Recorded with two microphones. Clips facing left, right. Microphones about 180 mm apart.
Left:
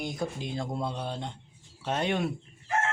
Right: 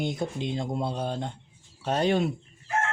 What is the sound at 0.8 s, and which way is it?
Speech, 35° right (ahead or behind).